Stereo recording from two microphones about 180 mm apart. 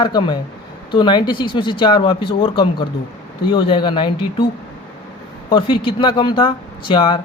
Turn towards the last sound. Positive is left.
turn(degrees=30)  # may be behind; listen again after turning